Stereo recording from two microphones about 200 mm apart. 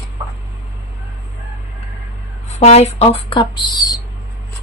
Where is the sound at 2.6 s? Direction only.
30° left (ahead or behind).